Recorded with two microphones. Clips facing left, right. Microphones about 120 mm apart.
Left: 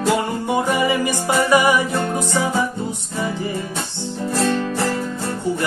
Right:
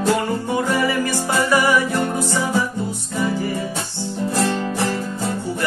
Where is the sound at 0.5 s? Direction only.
20° left (ahead or behind).